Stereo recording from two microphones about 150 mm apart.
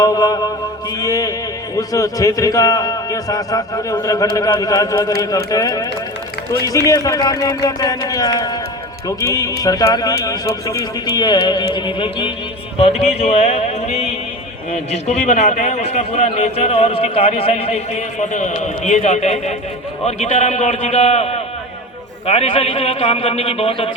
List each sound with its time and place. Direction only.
0.0 s mantra: 25° left (ahead or behind)
0.9 s music: 25° left (ahead or behind)
1.7 s a man's voice: 25° left (ahead or behind); by 23.9 s 40° left (ahead or behind)